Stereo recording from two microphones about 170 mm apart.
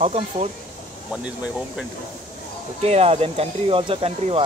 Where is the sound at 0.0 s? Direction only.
40° right (ahead or behind).